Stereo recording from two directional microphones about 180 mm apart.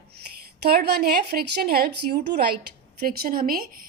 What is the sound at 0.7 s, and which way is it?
A woman's voice, 60° right (ahead or behind).